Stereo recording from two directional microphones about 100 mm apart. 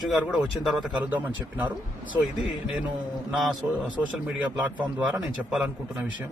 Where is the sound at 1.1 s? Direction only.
15° right (ahead or behind).